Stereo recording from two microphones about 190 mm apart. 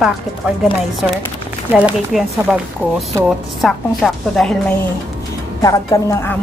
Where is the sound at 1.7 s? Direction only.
5° right (ahead or behind).